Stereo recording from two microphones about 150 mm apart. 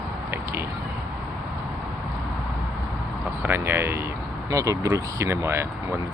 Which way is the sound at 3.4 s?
15° right (ahead or behind).